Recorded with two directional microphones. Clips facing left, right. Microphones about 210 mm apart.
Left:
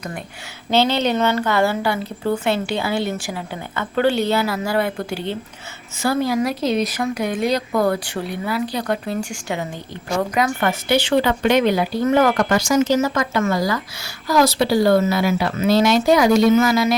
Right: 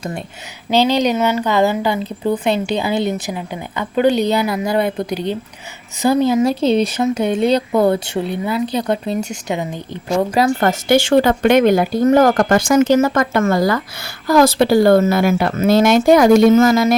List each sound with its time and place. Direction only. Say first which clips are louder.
0.7 s speech: right 3 dB; 15° right (ahead or behind)
10.3 s speech: right 5 dB; 35° right (ahead or behind)